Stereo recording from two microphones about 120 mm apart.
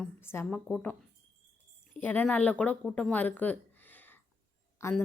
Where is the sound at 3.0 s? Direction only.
10° left (ahead or behind).